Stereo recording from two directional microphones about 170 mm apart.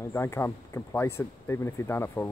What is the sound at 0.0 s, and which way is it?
Speech, 15° left (ahead or behind).